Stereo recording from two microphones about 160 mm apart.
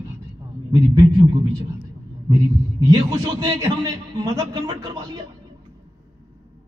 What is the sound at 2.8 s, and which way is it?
A man's voice, 25° right (ahead or behind).